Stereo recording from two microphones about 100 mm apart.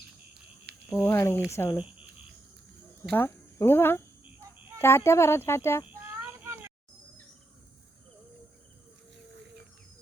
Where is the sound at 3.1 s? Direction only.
25° left (ahead or behind).